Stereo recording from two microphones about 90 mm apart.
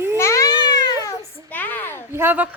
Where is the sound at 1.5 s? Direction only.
20° left (ahead or behind).